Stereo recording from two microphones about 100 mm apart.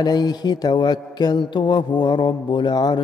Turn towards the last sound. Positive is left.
turn(degrees=45)  # may be behind; listen again after turning